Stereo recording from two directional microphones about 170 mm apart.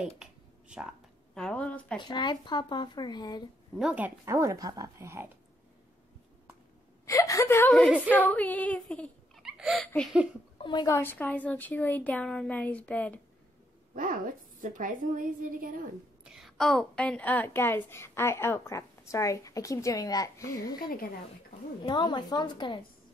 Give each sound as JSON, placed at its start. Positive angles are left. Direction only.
{"t": 0.2, "sound": "a sound", "side_deg": -5}
{"t": 1.3, "sound": "a woman's voice", "side_deg": 5}
{"t": 2.0, "sound": "speech", "side_deg": 25}
{"t": 3.7, "sound": "speech", "side_deg": -5}
{"t": 7.1, "sound": "a woman's voice", "side_deg": 20}
{"t": 10.6, "sound": "a woman's voice", "side_deg": 25}
{"t": 11.0, "sound": "a woman's voice", "side_deg": 10}
{"t": 13.9, "sound": "a woman's voice", "side_deg": -55}
{"t": 16.3, "sound": "a woman's voice", "side_deg": 0}
{"t": 21.8, "sound": "speech", "side_deg": 25}